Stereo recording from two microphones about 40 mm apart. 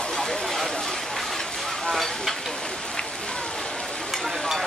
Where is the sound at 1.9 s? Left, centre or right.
Centre.